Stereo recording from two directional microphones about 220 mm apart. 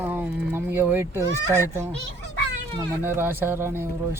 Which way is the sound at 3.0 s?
10° right (ahead or behind).